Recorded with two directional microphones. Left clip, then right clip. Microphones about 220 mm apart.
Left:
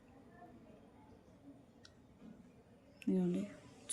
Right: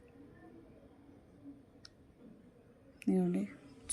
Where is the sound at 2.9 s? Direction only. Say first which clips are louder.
Right 4 dB; 15° right (ahead or behind).